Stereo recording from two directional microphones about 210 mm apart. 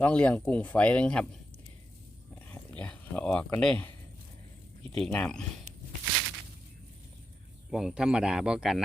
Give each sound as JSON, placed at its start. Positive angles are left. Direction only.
{"t": 0.0, "sound": "speech", "side_deg": 5}
{"t": 2.5, "sound": "speech", "side_deg": 5}
{"t": 4.9, "sound": "speech", "side_deg": 5}
{"t": 7.7, "sound": "speech", "side_deg": -5}